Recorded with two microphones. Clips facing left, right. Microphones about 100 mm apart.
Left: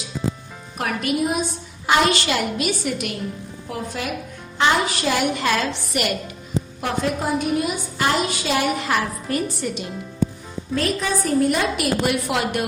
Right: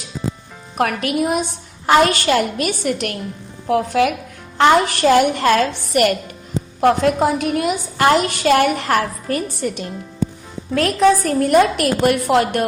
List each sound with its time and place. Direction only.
0.8 s a woman's voice: 60° right (ahead or behind)
1.9 s a woman's voice: 45° right (ahead or behind); by 4.1 s 65° right (ahead or behind)
4.5 s a woman's voice: 55° right (ahead or behind)
6.8 s a woman's voice: 60° right (ahead or behind)
10.8 s a woman's voice: 60° right (ahead or behind); by 12.6 s 45° right (ahead or behind)